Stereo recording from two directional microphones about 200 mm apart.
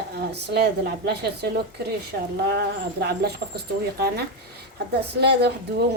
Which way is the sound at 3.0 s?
55° right (ahead or behind).